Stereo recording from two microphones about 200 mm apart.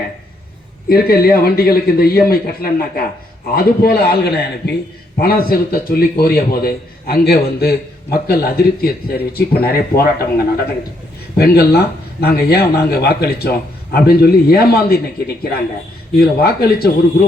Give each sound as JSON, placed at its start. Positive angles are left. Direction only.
{"t": 0.9, "sound": "a man's voice", "side_deg": 50}
{"t": 16.1, "sound": "a man's voice", "side_deg": 50}